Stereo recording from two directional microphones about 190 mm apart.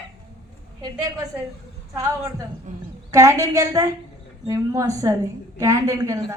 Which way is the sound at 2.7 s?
40° right (ahead or behind).